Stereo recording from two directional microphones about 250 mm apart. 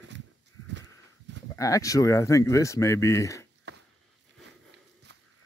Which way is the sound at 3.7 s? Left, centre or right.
Right.